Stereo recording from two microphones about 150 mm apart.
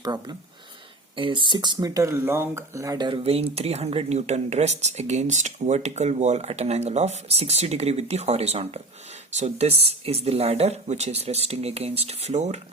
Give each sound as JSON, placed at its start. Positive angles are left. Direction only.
{"t": 0.0, "sound": "speech", "side_deg": -25}